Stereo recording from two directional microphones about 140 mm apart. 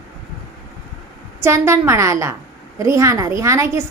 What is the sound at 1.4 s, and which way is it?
A woman's voice, 20° right (ahead or behind).